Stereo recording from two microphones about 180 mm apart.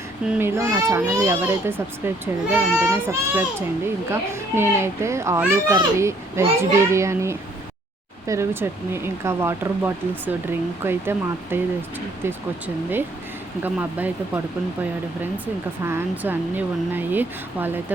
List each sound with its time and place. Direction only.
0.3 s a child's voice: 15° right (ahead or behind)
15.8 s a child's voice: 15° right (ahead or behind)